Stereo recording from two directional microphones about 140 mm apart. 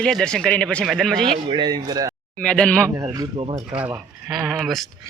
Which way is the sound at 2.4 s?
5° left (ahead or behind).